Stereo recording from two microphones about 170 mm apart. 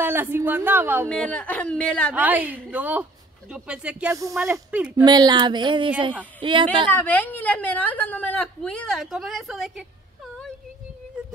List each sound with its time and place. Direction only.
0.0 s speech: 15° right (ahead or behind)
1.0 s a woman's voice: 5° left (ahead or behind)
2.1 s speech: 10° right (ahead or behind)
4.1 s speech: 20° right (ahead or behind)
4.9 s speech: 25° right (ahead or behind)
6.9 s a woman's voice: 10° left (ahead or behind)